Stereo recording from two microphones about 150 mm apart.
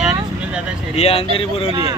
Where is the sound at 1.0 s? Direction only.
40° left (ahead or behind).